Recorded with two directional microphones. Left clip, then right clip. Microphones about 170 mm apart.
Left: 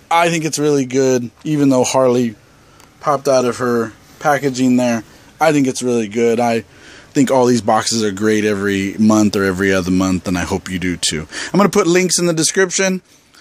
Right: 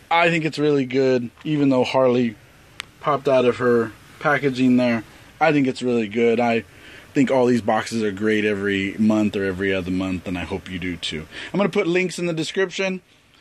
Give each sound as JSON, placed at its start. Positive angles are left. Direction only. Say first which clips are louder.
{"t": 0.1, "sound": "speech", "louder": "left 4 dB", "side_deg": 15}